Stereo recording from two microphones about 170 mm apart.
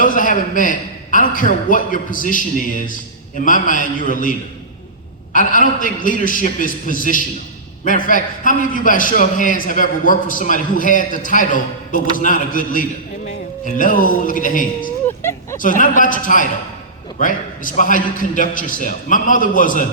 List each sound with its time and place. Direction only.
0.0 s a man's voice: 50° left (ahead or behind)
15.0 s a sound: 15° left (ahead or behind)
15.5 s a man's voice: 50° left (ahead or behind)